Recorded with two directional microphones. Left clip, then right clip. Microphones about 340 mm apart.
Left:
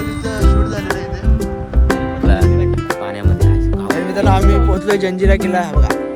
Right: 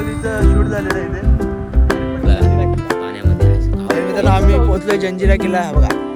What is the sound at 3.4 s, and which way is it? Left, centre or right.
Music, centre.